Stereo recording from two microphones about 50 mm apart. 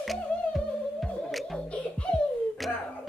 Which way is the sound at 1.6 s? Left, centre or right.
Left.